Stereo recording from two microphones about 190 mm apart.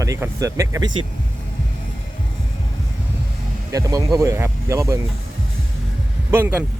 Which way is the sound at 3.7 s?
15° right (ahead or behind).